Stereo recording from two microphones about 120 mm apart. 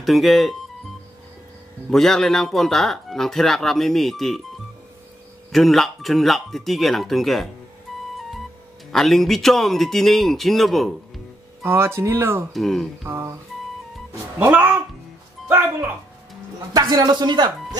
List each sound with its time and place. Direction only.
0.0 s speech: centre (ahead or behind)
1.9 s speech: 5° left (ahead or behind)
5.5 s speech: centre (ahead or behind)
8.9 s speech: centre (ahead or behind)
11.6 s speech: 20° right (ahead or behind)
12.5 s speech: 5° left (ahead or behind)
13.0 s speech: 20° right (ahead or behind)
14.4 s speech: 15° right (ahead or behind)
16.7 s speech: 30° right (ahead or behind)